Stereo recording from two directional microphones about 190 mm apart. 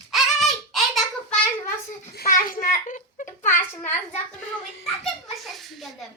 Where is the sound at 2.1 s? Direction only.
50° left (ahead or behind).